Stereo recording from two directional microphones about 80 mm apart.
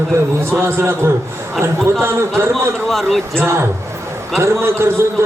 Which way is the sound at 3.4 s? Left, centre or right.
Right.